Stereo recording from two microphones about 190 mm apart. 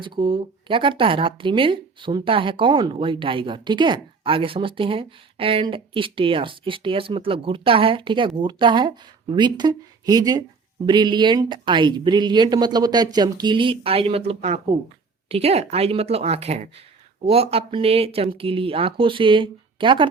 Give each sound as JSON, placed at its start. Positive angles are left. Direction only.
{"t": 0.0, "sound": "a woman's voice", "side_deg": -25}